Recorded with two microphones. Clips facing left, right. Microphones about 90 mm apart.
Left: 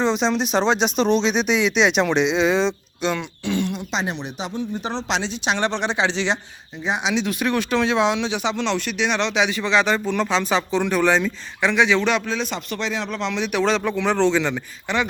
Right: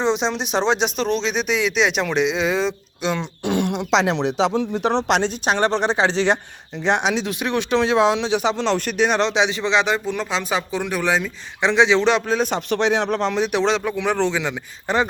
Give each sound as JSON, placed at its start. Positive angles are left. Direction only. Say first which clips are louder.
{"t": 0.0, "sound": "speech", "louder": "left 1 dB", "side_deg": -20}
{"t": 0.9, "sound": "speech", "louder": "left 3 dB", "side_deg": 0}
{"t": 3.4, "sound": "speech", "louder": "right 4 dB", "side_deg": -60}
{"t": 6.8, "sound": "speech", "louder": "right 5 dB", "side_deg": -65}
{"t": 7.3, "sound": "speech", "louder": "even", "side_deg": -25}
{"t": 11.6, "sound": "speech", "louder": "right 2 dB", "side_deg": -25}
{"t": 12.4, "sound": "speech", "louder": "right 6 dB", "side_deg": -55}
{"t": 13.8, "sound": "speech", "louder": "left 1 dB", "side_deg": -10}
{"t": 14.9, "sound": "a man's voice", "louder": "right 3 dB", "side_deg": -40}